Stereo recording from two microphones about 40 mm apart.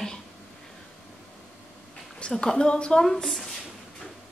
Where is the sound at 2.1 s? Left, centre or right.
Left.